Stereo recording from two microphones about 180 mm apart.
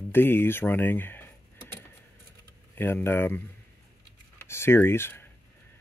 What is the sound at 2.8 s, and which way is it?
Speech, 10° left (ahead or behind).